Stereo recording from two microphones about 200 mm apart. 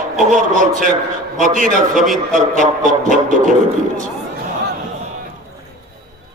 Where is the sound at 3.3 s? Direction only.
40° right (ahead or behind).